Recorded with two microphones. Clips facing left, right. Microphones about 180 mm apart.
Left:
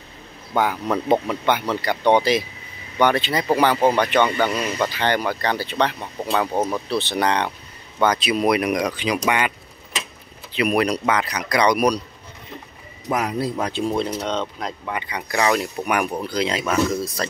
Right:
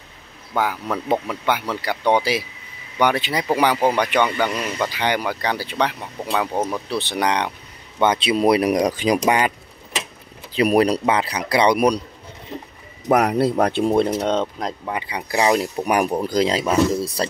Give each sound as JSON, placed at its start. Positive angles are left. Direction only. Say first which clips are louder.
{"t": 0.6, "sound": "speech", "louder": "left 2 dB", "side_deg": -5}
{"t": 4.6, "sound": "speech", "louder": "left 1 dB", "side_deg": 0}
{"t": 4.8, "sound": "speech", "louder": "even", "side_deg": -10}
{"t": 8.0, "sound": "speech", "louder": "right 2 dB", "side_deg": -25}
{"t": 10.5, "sound": "speech", "louder": "right 4 dB", "side_deg": -35}
{"t": 13.1, "sound": "speech", "louder": "right 6 dB", "side_deg": -65}
{"t": 14.9, "sound": "speech", "louder": "right 1 dB", "side_deg": -30}